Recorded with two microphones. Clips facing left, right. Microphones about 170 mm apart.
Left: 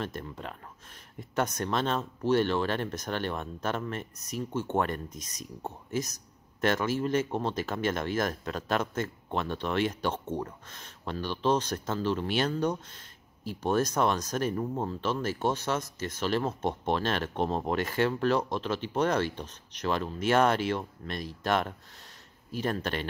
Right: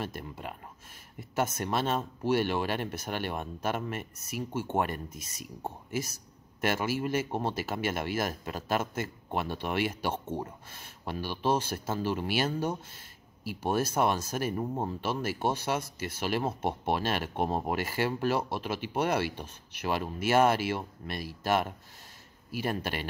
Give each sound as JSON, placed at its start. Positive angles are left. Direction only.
{"t": 0.0, "sound": "a man's voice", "side_deg": -10}